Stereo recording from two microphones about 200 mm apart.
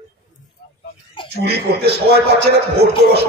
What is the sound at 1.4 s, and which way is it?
A man's voice, 55° right (ahead or behind).